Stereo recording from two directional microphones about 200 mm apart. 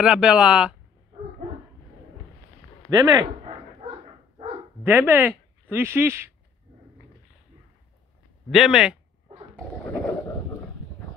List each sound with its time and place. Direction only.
0.0 s speech: 5° right (ahead or behind)
2.9 s speech: 20° right (ahead or behind)
3.8 s dog: 30° right (ahead or behind)
4.8 s speech: 10° right (ahead or behind)
8.5 s speech: centre (ahead or behind)